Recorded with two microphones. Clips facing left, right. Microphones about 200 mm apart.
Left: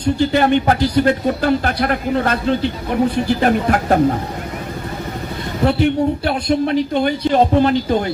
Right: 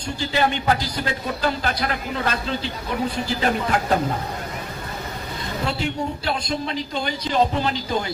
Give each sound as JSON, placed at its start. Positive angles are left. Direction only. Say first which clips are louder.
{"t": 0.2, "sound": "a man's voice", "louder": "left 6 dB", "side_deg": 55}
{"t": 5.6, "sound": "a man's voice", "louder": "left 11 dB", "side_deg": 60}